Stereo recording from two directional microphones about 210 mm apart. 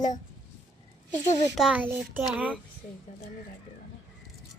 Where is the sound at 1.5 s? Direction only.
5° right (ahead or behind).